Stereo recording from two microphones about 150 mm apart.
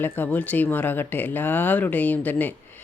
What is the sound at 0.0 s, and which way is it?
Speech, 10° left (ahead or behind).